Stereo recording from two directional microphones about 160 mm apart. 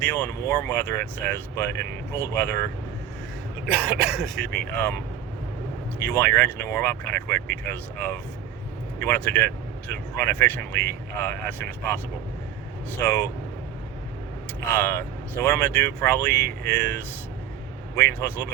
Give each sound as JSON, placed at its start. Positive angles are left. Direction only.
{"t": 0.0, "sound": "speech", "side_deg": 10}
{"t": 3.7, "sound": "speech", "side_deg": -10}
{"t": 4.4, "sound": "speech", "side_deg": 5}
{"t": 13.0, "sound": "speech", "side_deg": 15}
{"t": 14.7, "sound": "speech", "side_deg": 15}